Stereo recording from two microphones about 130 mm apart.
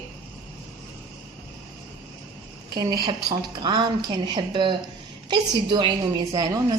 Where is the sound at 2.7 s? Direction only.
30° right (ahead or behind).